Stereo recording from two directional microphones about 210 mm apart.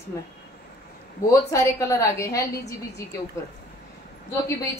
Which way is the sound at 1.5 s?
15° left (ahead or behind).